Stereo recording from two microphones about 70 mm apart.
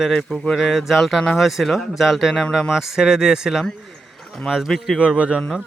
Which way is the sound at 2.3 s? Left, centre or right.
Centre.